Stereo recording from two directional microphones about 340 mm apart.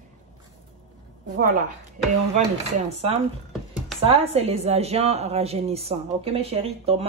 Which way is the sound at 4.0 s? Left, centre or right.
Centre.